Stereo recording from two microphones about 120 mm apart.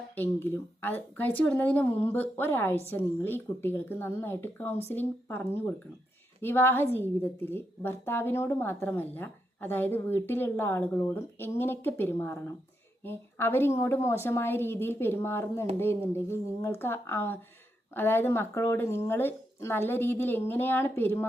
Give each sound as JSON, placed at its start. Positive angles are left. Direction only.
{"t": 0.2, "sound": "a woman's voice", "side_deg": 20}